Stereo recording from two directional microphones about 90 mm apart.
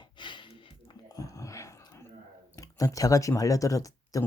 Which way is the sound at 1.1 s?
40° left (ahead or behind).